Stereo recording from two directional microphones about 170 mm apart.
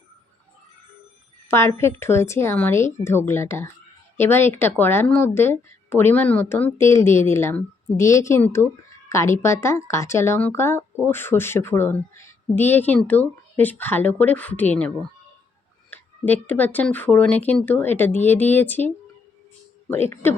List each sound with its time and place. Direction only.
1.5 s speech: 15° left (ahead or behind)